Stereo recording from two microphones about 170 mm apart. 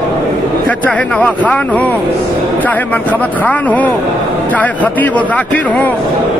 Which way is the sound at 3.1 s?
10° left (ahead or behind).